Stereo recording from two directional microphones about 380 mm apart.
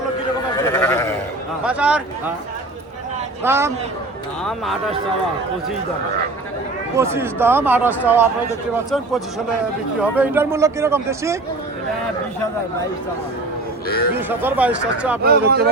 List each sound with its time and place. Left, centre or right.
0.5 s sheep: centre
1.6 s a sound: centre
3.4 s speech: centre
6.9 s speech: centre
13.8 s speech: left
14.1 s speech: centre
15.2 s speech: right